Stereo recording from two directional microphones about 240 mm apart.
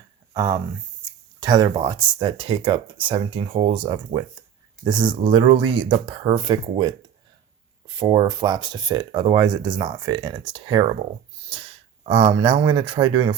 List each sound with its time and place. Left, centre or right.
0.3 s speech: centre
7.9 s speech: centre